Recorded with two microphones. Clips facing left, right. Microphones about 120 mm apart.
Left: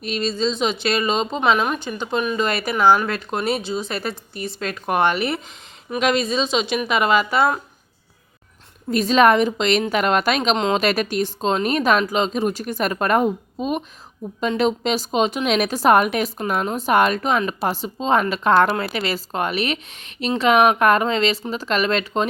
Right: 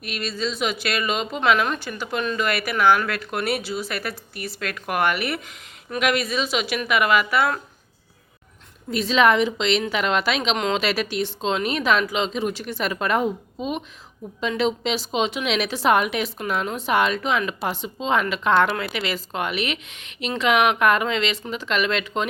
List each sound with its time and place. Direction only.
0.0 s speech: 25° left (ahead or behind)
1.4 s speech: 20° left (ahead or behind)
8.9 s a woman's voice: 45° left (ahead or behind)